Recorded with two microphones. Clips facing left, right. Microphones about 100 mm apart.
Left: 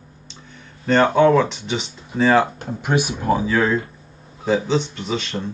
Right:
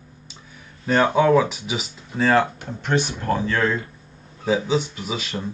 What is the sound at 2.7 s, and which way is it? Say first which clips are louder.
Speech: left 2 dB; 10° left (ahead or behind).